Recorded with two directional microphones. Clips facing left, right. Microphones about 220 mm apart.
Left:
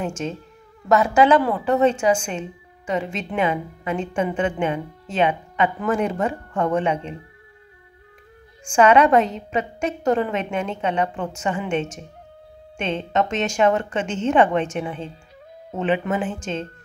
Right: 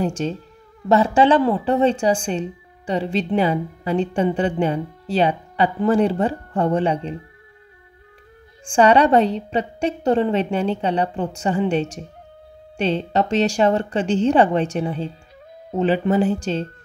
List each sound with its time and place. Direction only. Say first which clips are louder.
0.0 s a woman's voice: right 4 dB; 35° right (ahead or behind)
8.7 s a woman's voice: right 1 dB; 35° right (ahead or behind)